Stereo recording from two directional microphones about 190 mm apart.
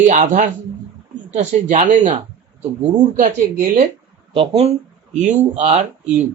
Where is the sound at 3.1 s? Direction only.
45° right (ahead or behind).